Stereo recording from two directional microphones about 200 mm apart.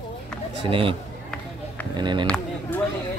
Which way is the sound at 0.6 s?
25° right (ahead or behind).